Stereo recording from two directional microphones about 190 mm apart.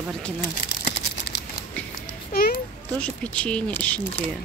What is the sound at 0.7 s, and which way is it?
Crumpling, 60° left (ahead or behind).